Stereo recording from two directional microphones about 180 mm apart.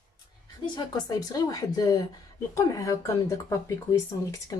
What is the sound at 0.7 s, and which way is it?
Speech, 20° left (ahead or behind).